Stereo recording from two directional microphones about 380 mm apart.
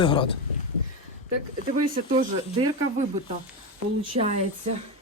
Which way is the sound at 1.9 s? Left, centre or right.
Right.